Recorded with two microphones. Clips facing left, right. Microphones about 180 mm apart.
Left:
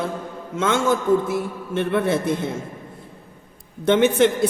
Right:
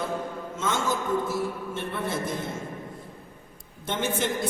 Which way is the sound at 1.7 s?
75° left (ahead or behind).